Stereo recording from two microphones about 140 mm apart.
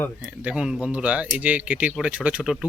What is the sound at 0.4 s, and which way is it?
Speech, 5° right (ahead or behind).